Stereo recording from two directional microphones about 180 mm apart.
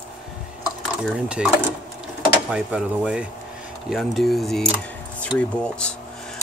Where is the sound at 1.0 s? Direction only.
5° right (ahead or behind).